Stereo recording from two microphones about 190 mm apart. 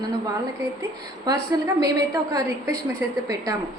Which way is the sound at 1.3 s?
20° right (ahead or behind).